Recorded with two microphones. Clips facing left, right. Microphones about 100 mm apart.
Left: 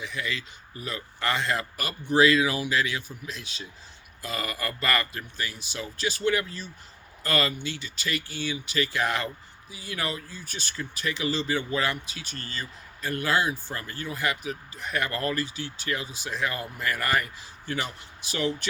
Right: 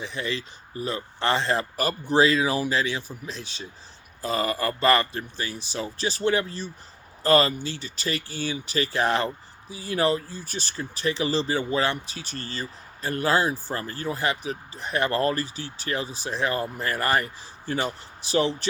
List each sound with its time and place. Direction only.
0.0 s speech: 30° right (ahead or behind)